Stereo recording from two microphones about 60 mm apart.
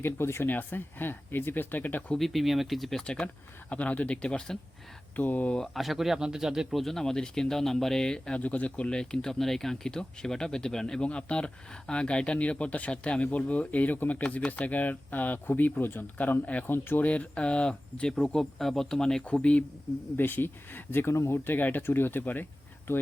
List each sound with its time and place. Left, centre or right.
0.0 s speech: left
0.4 s speech: left
2.1 s speech: centre
3.7 s speech: left
5.1 s speech: left
5.7 s speech: centre
8.4 s speech: left
16.6 s speech: left
17.1 s speech: left
20.1 s speech: left